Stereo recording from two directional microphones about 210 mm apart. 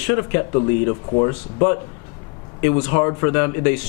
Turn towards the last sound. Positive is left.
turn(degrees=10)  # may be behind; listen again after turning